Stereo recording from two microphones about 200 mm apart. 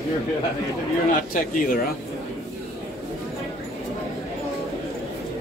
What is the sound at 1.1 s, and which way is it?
Speech, 45° left (ahead or behind).